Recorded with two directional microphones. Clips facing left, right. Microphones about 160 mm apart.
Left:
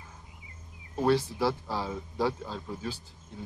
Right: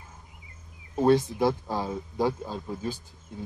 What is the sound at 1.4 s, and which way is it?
Speech, 15° right (ahead or behind).